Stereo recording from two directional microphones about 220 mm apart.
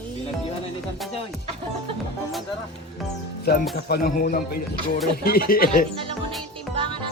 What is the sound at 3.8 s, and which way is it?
Speech, 45° left (ahead or behind).